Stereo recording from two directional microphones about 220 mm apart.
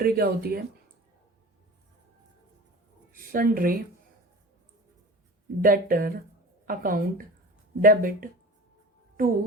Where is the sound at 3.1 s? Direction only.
40° right (ahead or behind).